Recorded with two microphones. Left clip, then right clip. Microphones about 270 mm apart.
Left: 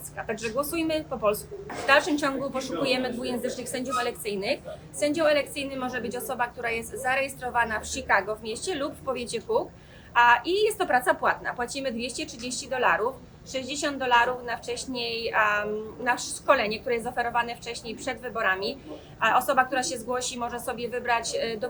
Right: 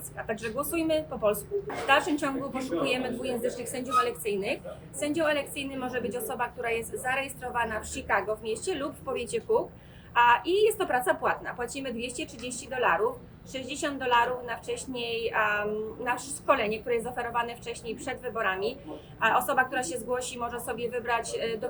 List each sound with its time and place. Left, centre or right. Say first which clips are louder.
0.3 s a woman's voice: left 3 dB; centre